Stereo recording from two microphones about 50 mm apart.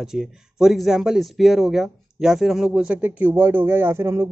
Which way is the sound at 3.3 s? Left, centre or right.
Right.